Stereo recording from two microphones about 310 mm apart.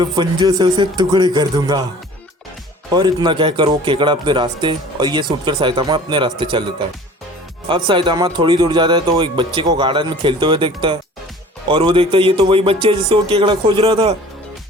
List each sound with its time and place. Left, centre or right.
0.0 s speech: centre
2.9 s speech: centre